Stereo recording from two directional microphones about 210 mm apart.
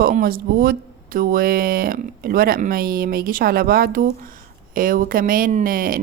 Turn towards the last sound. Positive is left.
turn(degrees=-40)  # may be behind; listen again after turning